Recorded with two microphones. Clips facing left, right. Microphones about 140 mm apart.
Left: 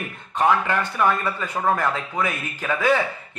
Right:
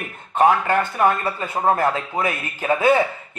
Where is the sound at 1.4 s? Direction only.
25° right (ahead or behind).